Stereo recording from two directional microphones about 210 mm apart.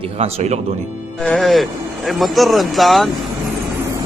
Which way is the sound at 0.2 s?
30° right (ahead or behind).